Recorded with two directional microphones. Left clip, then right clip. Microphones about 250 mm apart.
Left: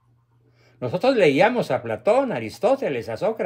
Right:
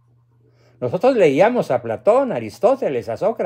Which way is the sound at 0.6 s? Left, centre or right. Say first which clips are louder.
Right 5 dB; centre.